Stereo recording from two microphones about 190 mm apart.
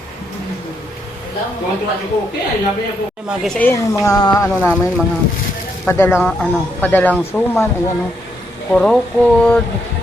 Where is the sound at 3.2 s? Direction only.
Centre (ahead or behind); by 4.7 s 20° left (ahead or behind).